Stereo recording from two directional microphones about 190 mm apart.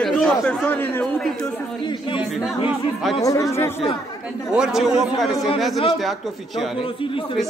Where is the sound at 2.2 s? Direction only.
5° right (ahead or behind).